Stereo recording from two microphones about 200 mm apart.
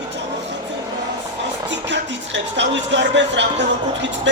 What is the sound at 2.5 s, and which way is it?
Speech, 60° right (ahead or behind).